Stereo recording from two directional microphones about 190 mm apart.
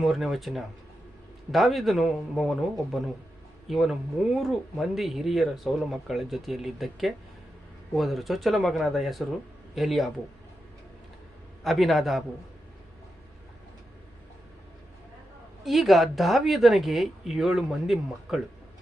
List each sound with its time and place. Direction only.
0.0 s speech: centre (ahead or behind)
11.6 s speech: centre (ahead or behind)
15.6 s speech: centre (ahead or behind)